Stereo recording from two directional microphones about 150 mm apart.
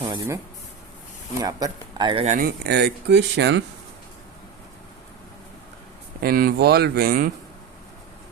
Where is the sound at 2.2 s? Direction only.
55° right (ahead or behind).